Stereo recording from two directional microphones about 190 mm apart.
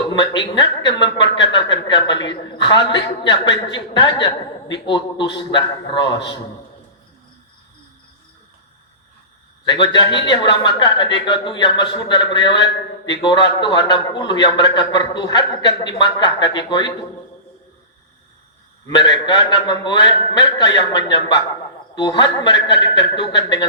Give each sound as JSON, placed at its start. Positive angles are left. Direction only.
{"t": 0.1, "sound": "a man's voice", "side_deg": 25}
{"t": 9.6, "sound": "a man's voice", "side_deg": 25}
{"t": 18.9, "sound": "a man's voice", "side_deg": 25}